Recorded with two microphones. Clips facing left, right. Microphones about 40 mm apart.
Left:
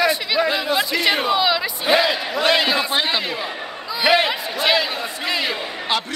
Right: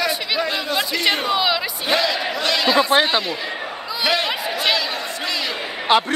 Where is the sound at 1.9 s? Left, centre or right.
Centre.